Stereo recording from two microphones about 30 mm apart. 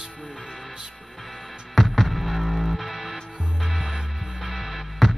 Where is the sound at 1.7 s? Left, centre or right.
Centre.